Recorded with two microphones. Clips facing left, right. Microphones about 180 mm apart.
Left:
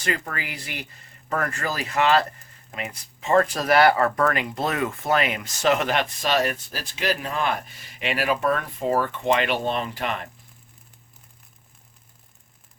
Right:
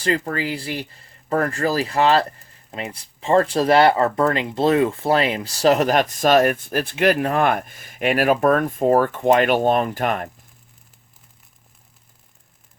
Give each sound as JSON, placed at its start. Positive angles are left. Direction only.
{"t": 0.0, "sound": "speech", "side_deg": -30}